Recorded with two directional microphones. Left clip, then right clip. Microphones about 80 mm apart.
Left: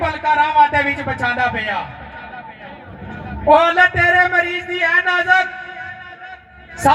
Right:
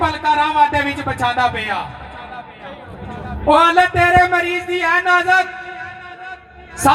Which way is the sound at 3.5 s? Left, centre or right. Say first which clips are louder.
Even; right.